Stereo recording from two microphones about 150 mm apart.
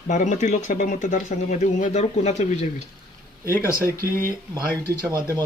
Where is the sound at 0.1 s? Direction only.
55° left (ahead or behind).